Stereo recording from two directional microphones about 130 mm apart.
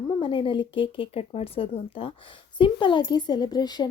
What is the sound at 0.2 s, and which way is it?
Speech, 40° left (ahead or behind).